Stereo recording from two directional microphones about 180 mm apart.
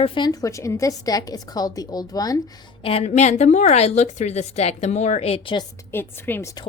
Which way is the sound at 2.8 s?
35° left (ahead or behind).